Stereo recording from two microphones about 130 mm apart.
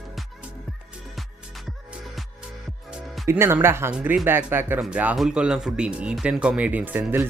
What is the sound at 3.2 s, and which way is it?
Speech, 20° right (ahead or behind).